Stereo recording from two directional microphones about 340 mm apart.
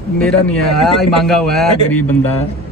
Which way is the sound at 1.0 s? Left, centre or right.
Centre.